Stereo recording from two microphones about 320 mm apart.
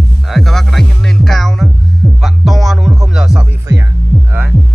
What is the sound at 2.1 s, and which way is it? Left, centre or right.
Music, centre.